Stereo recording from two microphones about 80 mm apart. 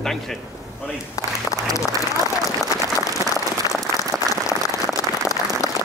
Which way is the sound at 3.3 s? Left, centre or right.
Left.